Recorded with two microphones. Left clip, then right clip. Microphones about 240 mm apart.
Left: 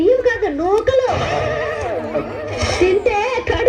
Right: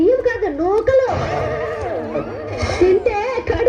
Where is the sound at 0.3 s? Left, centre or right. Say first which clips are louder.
Left 2 dB; left.